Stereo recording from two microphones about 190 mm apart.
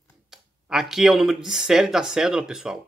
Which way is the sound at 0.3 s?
Centre (ahead or behind).